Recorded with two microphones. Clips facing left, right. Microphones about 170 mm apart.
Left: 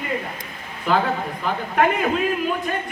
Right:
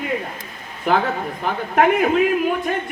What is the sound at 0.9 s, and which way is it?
A man's voice, 50° right (ahead or behind).